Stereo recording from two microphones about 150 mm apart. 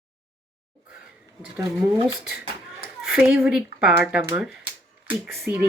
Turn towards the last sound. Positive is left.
turn(degrees=-5)  # may be behind; listen again after turning